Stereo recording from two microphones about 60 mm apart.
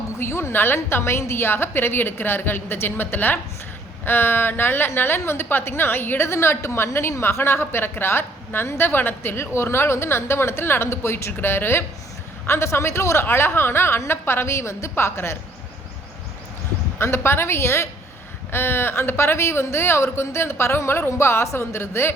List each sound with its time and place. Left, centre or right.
0.2 s a woman's voice: left
17.0 s a woman's voice: left